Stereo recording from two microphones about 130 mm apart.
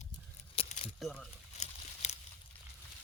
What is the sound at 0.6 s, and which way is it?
Keys jangling, 50° left (ahead or behind).